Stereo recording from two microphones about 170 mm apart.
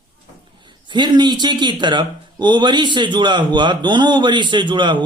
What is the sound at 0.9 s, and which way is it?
Speech, 25° right (ahead or behind).